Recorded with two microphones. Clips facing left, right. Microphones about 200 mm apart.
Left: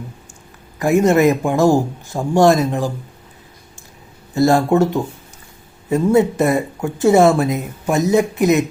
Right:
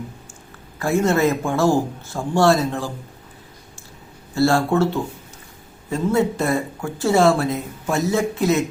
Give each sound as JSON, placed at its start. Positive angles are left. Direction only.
{"t": 0.8, "sound": "a man's voice", "side_deg": 15}
{"t": 4.4, "sound": "a man's voice", "side_deg": 20}